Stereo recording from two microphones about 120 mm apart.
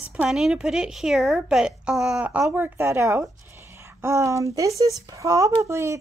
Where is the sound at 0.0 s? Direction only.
10° right (ahead or behind).